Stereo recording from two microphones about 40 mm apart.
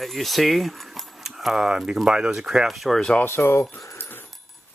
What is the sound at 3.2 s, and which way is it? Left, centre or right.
Speech, left.